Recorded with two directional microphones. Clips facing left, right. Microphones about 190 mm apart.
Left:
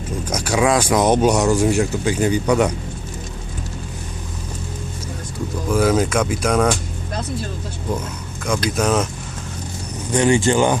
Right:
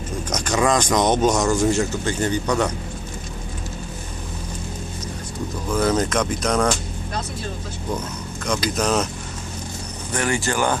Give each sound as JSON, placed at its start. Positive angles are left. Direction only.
{"t": 0.3, "sound": "speech", "side_deg": 10}
{"t": 5.7, "sound": "speech", "side_deg": 5}
{"t": 8.4, "sound": "speech", "side_deg": 5}
{"t": 10.1, "sound": "speech", "side_deg": 15}